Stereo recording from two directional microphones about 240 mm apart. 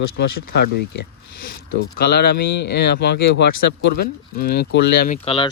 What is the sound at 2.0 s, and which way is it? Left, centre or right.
Speech, left.